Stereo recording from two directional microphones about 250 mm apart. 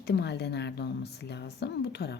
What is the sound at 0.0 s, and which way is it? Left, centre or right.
Speech, left.